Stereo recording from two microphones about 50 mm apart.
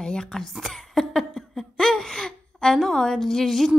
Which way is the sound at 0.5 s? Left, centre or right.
Centre.